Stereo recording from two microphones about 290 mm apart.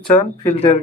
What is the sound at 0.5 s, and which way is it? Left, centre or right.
Speech, left.